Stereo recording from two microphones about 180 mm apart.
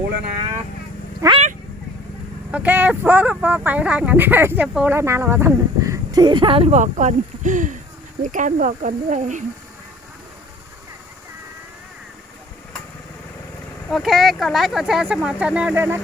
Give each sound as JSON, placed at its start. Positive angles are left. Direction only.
{"t": 1.2, "sound": "speech", "side_deg": -20}
{"t": 2.5, "sound": "speech", "side_deg": -10}
{"t": 13.9, "sound": "speech", "side_deg": 0}